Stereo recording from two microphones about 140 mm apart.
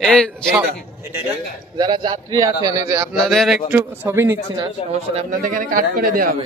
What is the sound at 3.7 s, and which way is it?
Speech, 15° right (ahead or behind).